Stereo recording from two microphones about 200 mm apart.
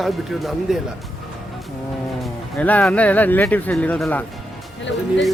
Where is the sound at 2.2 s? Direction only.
5° left (ahead or behind).